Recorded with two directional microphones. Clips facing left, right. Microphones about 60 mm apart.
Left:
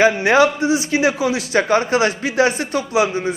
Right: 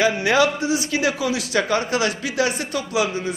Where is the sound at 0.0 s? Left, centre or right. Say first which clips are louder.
Left 4 dB; left.